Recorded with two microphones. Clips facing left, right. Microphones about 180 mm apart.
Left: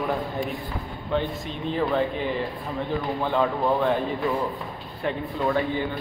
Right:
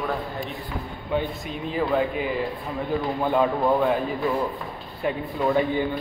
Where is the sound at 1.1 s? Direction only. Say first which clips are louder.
Even; 10° right (ahead or behind).